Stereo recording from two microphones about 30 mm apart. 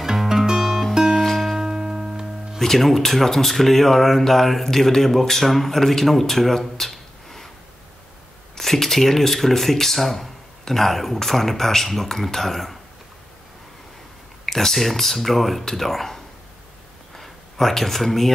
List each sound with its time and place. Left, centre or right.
0.0 s music: centre
1.6 s music: right
2.6 s speech: centre
8.5 s speech: centre
14.4 s speech: centre
17.1 s a sound: centre